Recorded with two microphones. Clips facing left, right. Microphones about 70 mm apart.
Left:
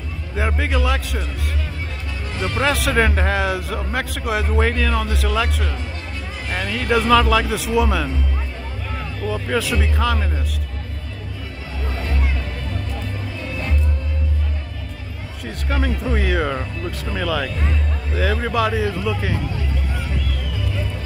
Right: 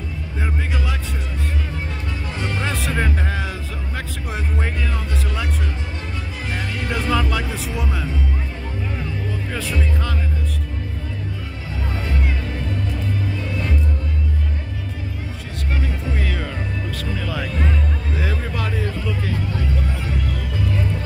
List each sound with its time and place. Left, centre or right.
0.4 s a man's voice: left
2.6 s a man's voice: left
9.5 s a man's voice: left
15.7 s speech: left
18.3 s a man's voice: left